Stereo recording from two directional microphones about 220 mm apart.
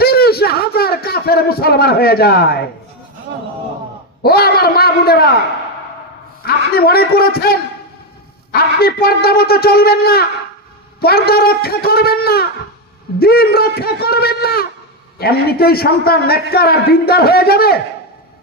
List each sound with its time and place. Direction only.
0.0 s a sound: 45° left (ahead or behind)
4.2 s a man's voice: 45° left (ahead or behind)
6.4 s a man's voice: 45° left (ahead or behind)